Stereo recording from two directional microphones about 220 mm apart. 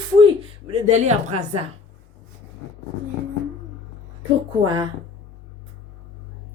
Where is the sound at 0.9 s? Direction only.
30° right (ahead or behind).